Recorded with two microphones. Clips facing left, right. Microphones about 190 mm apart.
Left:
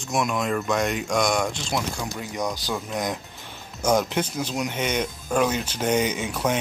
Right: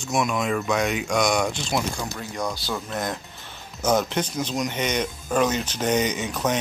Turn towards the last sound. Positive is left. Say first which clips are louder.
# even
turn(degrees=10)  # may be behind; listen again after turning